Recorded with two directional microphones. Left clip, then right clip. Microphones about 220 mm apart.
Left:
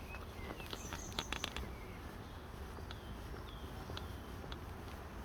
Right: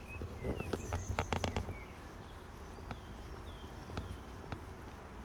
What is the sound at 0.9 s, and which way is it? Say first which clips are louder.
Fireworks: right 1 dB; 15° right (ahead or behind).